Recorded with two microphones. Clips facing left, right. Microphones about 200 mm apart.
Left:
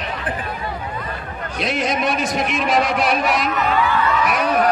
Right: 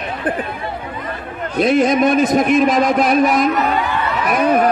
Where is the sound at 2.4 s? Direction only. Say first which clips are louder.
Right 6 dB; 45° right (ahead or behind).